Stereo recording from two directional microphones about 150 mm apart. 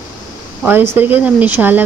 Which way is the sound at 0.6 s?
15° right (ahead or behind).